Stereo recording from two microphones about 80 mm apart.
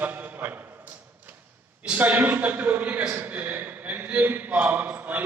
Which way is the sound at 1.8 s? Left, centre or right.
Centre.